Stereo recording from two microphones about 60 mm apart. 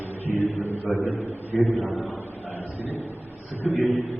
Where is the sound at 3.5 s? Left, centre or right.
Left.